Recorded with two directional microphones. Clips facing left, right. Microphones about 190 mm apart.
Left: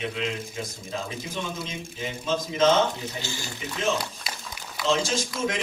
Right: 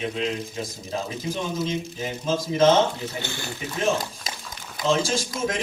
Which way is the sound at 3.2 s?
60° right (ahead or behind).